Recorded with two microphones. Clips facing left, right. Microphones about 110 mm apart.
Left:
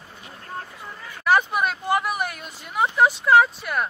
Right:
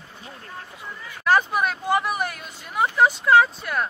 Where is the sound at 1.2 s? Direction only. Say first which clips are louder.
Even; centre (ahead or behind).